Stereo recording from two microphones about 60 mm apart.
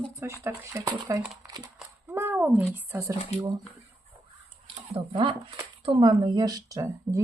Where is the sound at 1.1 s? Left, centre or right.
Right.